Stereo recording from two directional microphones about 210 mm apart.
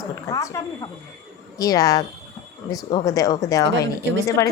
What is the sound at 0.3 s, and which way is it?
A woman's voice, 15° left (ahead or behind).